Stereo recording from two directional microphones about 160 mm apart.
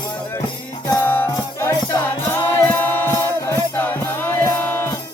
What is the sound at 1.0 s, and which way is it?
Music, 10° left (ahead or behind).